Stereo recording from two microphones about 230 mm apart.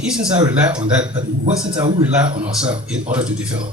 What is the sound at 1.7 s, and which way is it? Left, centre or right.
Speech, right.